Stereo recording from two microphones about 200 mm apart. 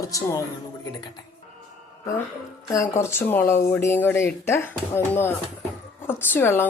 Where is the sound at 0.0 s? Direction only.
15° left (ahead or behind).